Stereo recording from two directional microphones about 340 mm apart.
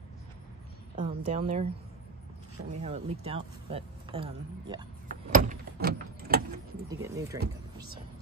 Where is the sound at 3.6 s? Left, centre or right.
Centre.